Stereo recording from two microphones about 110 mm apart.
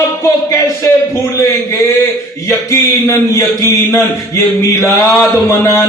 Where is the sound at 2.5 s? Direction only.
25° left (ahead or behind).